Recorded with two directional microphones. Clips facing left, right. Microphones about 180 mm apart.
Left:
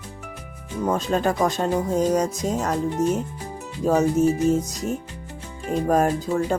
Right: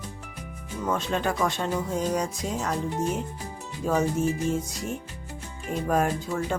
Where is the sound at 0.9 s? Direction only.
40° left (ahead or behind).